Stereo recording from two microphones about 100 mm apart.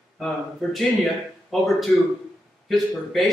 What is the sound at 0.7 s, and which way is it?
A man's voice, centre (ahead or behind).